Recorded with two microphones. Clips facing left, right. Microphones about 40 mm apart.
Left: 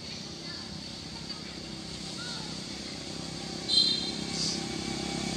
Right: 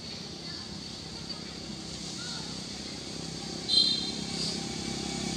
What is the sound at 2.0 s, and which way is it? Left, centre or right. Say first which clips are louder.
Vehicle: left 2 dB; centre.